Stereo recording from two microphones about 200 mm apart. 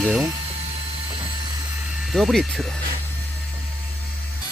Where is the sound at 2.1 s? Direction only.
Centre (ahead or behind).